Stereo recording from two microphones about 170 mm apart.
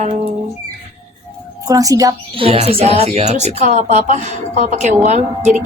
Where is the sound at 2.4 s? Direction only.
35° right (ahead or behind).